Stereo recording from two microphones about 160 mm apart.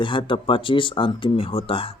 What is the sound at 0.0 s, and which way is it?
Speech, 30° left (ahead or behind).